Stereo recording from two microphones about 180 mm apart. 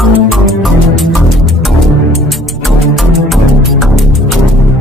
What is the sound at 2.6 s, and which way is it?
Music, centre (ahead or behind).